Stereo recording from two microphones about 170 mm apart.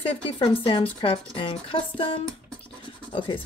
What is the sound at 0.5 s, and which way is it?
Speech, 30° left (ahead or behind).